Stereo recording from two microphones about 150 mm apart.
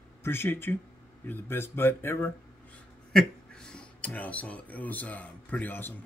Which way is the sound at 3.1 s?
5° left (ahead or behind).